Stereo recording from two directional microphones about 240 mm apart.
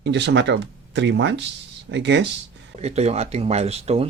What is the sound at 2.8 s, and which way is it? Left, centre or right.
Speech, right.